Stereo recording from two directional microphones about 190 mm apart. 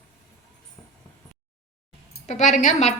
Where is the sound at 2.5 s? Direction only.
40° left (ahead or behind).